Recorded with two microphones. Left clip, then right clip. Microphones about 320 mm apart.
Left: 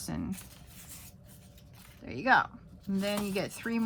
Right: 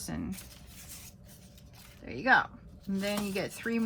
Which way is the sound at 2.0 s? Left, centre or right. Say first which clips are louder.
Even; centre.